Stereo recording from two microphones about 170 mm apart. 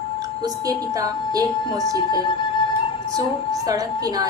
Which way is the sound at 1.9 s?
25° left (ahead or behind).